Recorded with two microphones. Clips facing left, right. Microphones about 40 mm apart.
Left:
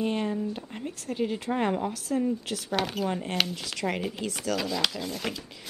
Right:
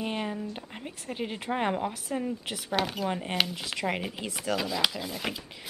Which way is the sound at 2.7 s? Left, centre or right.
Centre.